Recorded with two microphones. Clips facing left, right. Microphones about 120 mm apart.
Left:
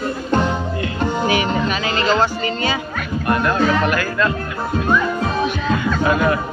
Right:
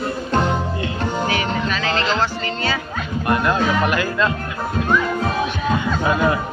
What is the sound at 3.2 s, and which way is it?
Music, 15° right (ahead or behind).